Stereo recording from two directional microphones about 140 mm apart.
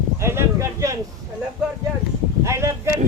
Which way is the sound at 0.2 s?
20° right (ahead or behind).